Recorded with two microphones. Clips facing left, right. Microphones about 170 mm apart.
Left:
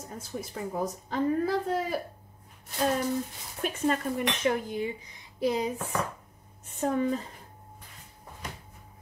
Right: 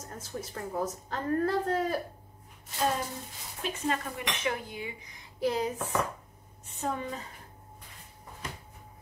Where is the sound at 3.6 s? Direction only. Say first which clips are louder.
Left 4 dB; 50° left (ahead or behind).